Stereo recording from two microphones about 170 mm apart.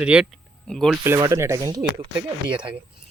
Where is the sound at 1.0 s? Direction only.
20° right (ahead or behind).